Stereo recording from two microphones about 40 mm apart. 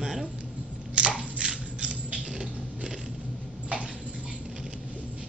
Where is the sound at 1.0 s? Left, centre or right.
Right.